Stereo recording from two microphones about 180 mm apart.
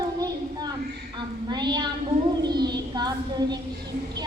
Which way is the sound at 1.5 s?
25° right (ahead or behind).